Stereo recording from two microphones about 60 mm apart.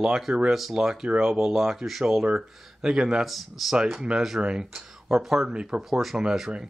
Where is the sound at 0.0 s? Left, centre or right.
Centre.